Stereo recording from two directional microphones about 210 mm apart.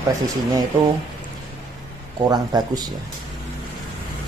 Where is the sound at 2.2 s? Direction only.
20° right (ahead or behind).